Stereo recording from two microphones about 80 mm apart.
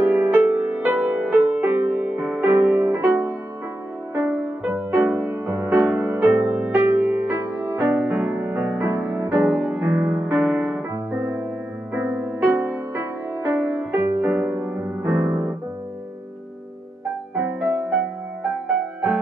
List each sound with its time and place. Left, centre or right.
0.0 s music: right
17.4 s music: right